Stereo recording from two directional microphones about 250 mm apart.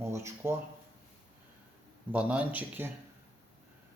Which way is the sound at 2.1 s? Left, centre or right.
Centre.